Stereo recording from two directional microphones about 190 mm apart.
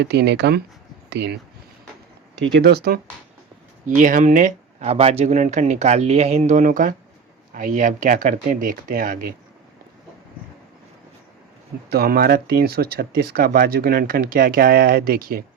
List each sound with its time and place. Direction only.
0.0 s speech: 60° right (ahead or behind)
2.4 s speech: 60° right (ahead or behind)
3.8 s speech: 40° right (ahead or behind)
11.9 s speech: 55° right (ahead or behind)